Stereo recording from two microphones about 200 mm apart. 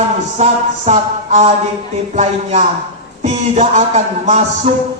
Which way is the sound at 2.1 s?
35° right (ahead or behind).